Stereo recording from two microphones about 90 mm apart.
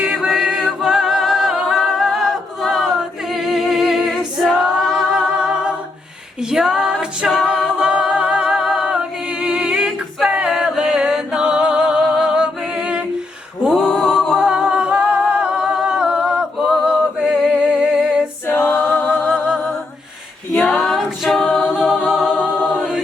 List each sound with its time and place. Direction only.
0.0 s a capella: 10° right (ahead or behind)
18.4 s a capella: 25° left (ahead or behind)
19.0 s music: 10° right (ahead or behind)
20.7 s a capella: 5° left (ahead or behind)